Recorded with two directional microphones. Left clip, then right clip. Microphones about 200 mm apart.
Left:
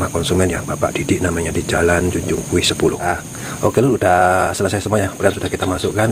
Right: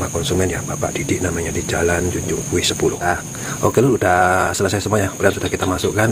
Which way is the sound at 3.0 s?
Centre (ahead or behind).